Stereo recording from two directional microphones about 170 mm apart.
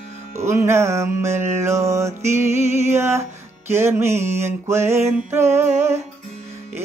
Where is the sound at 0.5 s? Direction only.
15° right (ahead or behind).